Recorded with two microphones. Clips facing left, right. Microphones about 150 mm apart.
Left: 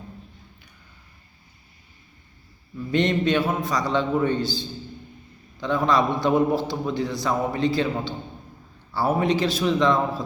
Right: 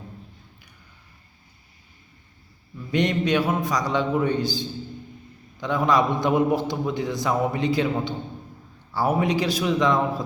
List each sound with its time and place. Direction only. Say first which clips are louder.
2.9 s a man's voice: left 1 dB; 10° right (ahead or behind)